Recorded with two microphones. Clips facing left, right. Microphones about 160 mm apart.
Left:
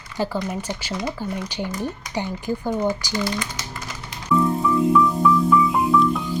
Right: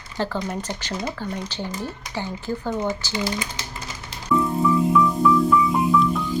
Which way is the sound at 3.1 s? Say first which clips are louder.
Left 1 dB; 20° right (ahead or behind).